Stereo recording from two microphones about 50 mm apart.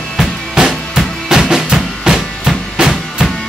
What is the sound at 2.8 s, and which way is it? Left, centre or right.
Music, centre.